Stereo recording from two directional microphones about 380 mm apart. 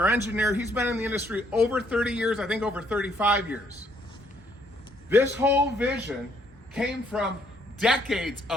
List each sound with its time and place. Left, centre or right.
0.0 s speech: centre
5.0 s speech: centre